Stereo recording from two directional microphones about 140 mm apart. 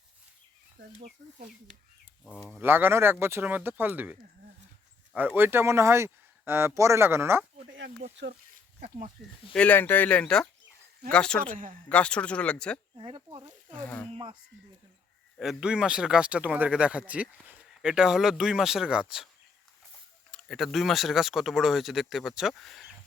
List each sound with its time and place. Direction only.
2.6 s speech: 15° right (ahead or behind)
9.2 s speech: centre (ahead or behind)
9.6 s speech: 15° left (ahead or behind)
11.5 s speech: 75° right (ahead or behind)
11.9 s speech: 10° left (ahead or behind)
13.0 s speech: 40° right (ahead or behind)
13.7 s speech: 10° left (ahead or behind)
15.4 s speech: 5° right (ahead or behind)
20.3 s speech: centre (ahead or behind)